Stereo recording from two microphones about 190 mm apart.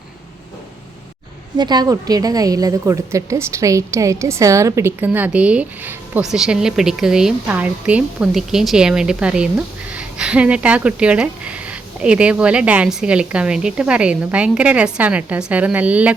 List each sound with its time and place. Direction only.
1.5 s a woman's voice: 20° right (ahead or behind)